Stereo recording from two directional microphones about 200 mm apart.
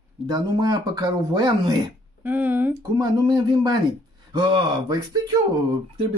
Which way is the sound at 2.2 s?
10° right (ahead or behind).